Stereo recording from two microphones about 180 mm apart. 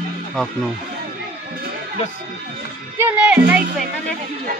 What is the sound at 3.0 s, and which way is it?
Speech, 10° right (ahead or behind).